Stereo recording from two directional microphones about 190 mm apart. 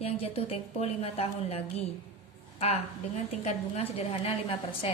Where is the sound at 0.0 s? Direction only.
30° left (ahead or behind).